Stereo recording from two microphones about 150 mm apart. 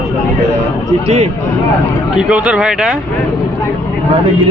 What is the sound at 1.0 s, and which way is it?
Speech, 45° right (ahead or behind).